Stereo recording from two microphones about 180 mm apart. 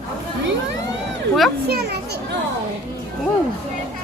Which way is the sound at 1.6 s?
65° right (ahead or behind).